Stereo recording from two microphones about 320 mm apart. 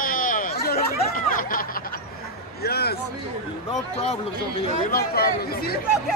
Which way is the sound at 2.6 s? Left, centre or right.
Left.